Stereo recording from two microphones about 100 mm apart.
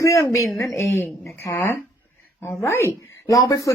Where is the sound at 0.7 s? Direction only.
20° left (ahead or behind).